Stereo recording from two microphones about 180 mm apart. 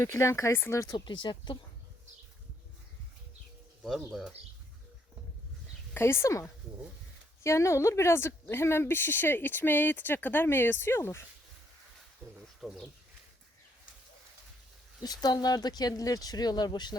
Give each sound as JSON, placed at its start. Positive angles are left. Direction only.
{"t": 0.0, "sound": "a woman's voice", "side_deg": 15}
{"t": 4.1, "sound": "speech", "side_deg": 0}
{"t": 5.9, "sound": "a woman's voice", "side_deg": 15}
{"t": 12.2, "sound": "speech", "side_deg": -10}
{"t": 12.5, "sound": "bird", "side_deg": 0}
{"t": 15.0, "sound": "speech", "side_deg": 20}